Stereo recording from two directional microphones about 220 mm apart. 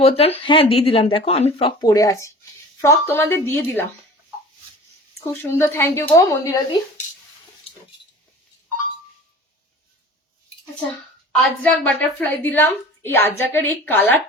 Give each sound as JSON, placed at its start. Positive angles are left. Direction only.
{"t": 0.0, "sound": "a woman's voice", "side_deg": 25}
{"t": 5.2, "sound": "a woman's voice", "side_deg": 10}
{"t": 11.3, "sound": "a woman's voice", "side_deg": 5}